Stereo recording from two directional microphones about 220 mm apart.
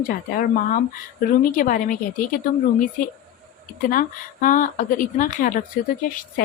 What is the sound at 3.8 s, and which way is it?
Speech, 40° left (ahead or behind).